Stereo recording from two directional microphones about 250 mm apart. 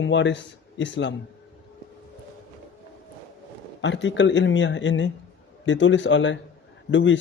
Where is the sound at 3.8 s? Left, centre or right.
Left.